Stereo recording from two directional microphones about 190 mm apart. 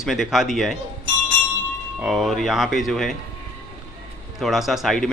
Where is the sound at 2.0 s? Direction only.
Centre (ahead or behind).